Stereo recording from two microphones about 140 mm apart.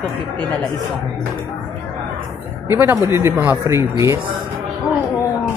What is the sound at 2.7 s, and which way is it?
Speech, 20° right (ahead or behind).